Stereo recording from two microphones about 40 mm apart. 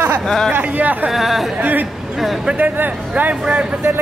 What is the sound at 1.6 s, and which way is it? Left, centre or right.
Speech, right.